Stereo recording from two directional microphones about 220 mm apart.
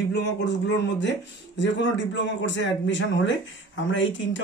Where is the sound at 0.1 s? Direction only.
50° left (ahead or behind).